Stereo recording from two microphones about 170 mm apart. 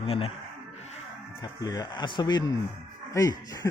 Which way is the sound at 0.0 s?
35° left (ahead or behind).